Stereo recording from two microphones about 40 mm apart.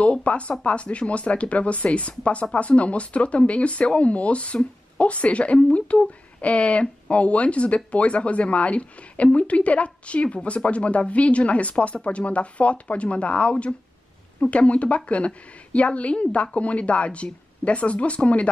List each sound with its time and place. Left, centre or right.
0.0 s speech: left